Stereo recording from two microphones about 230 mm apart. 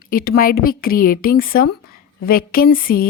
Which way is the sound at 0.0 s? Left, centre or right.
Left.